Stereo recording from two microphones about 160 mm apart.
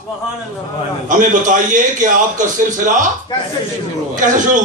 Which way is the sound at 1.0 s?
55° right (ahead or behind).